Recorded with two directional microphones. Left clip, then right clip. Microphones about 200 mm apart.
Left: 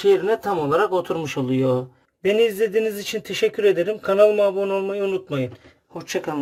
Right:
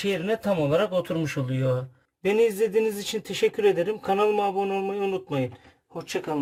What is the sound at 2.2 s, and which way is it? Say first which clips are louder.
A man's voice: left 3 dB; centre (ahead or behind).